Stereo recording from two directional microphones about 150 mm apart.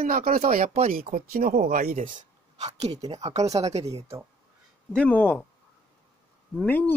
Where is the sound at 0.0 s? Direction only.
70° right (ahead or behind); by 4.0 s 45° right (ahead or behind).